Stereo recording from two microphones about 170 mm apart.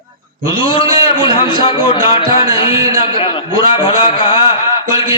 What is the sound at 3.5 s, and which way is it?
Speech, 25° left (ahead or behind).